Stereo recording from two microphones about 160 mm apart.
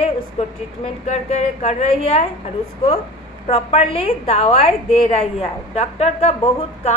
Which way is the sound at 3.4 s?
40° left (ahead or behind).